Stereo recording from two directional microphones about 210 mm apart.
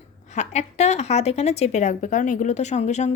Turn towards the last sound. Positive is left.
turn(degrees=35)  # may be behind; listen again after turning